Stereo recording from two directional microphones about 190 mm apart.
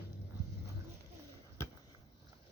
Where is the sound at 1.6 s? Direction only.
15° left (ahead or behind).